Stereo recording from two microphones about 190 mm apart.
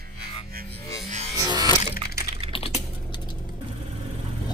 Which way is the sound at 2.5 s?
30° left (ahead or behind).